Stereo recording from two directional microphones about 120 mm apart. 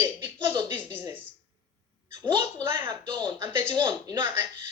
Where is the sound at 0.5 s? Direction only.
25° right (ahead or behind).